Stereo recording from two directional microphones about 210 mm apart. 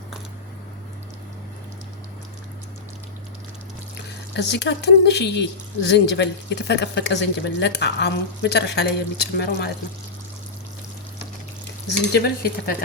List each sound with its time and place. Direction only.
4.4 s a woman's voice: 55° left (ahead or behind)
12.1 s a woman's voice: 50° left (ahead or behind)